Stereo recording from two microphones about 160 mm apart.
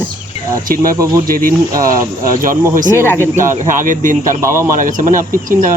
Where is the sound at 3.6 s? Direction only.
55° right (ahead or behind).